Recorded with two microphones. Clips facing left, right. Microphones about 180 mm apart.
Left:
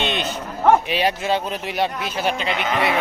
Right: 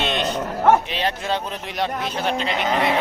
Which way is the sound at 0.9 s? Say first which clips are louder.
Left 3 dB; 10° left (ahead or behind).